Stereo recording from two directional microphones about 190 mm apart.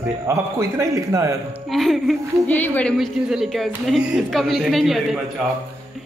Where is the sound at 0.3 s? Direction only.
15° right (ahead or behind).